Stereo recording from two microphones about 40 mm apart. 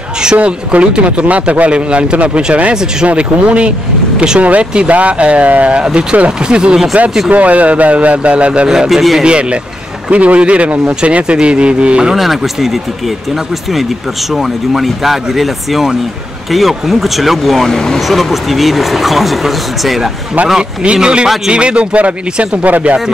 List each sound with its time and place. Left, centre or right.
0.4 s speech: right
2.7 s a man's voice: centre
3.1 s speech: right
7.2 s speech: right
8.6 s a man's voice: centre
9.2 s speech: right
12.2 s speech: centre
14.3 s speech: centre
17.6 s speech: centre
18.0 s speech: centre
20.8 s speech: right